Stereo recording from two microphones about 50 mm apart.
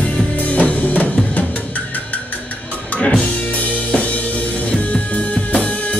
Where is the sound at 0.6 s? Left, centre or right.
Left.